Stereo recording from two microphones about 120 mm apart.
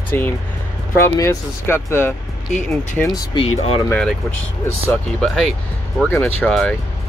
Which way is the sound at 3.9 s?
10° left (ahead or behind).